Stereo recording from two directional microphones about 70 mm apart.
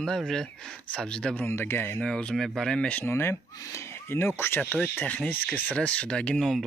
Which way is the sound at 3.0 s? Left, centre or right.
Left.